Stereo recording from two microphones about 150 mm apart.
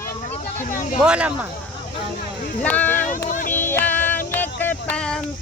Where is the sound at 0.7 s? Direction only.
60° left (ahead or behind).